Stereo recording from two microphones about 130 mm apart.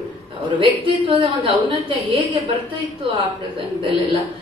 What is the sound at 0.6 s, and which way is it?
A woman's voice, 40° right (ahead or behind).